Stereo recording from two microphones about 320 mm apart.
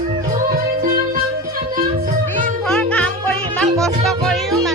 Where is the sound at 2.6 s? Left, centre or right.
Centre.